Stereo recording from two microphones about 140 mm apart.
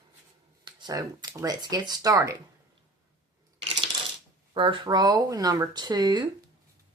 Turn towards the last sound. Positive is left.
turn(degrees=-30)  # may be behind; listen again after turning